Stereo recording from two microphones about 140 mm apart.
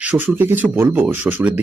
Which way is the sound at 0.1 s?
15° right (ahead or behind).